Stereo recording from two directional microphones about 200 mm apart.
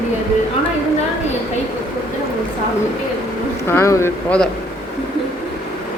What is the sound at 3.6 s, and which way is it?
Speech, 15° left (ahead or behind).